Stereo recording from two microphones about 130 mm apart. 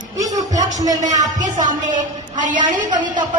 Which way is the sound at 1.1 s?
75° right (ahead or behind).